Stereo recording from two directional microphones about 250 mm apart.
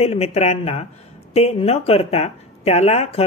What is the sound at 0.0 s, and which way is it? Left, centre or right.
Speech, left.